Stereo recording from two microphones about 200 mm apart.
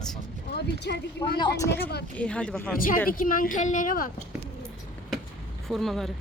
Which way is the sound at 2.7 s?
45° left (ahead or behind).